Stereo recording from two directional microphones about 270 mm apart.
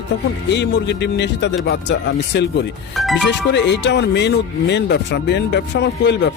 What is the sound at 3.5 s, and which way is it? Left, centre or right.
Speech, left.